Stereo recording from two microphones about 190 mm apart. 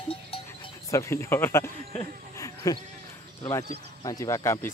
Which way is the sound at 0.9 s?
15° left (ahead or behind).